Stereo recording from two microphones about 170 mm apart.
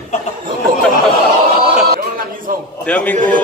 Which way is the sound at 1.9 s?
55° right (ahead or behind).